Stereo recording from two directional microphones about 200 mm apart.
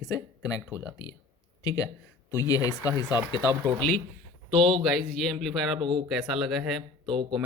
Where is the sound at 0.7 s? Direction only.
5° right (ahead or behind).